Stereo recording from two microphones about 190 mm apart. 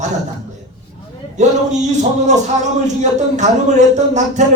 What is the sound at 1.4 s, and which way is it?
Speech, 40° right (ahead or behind).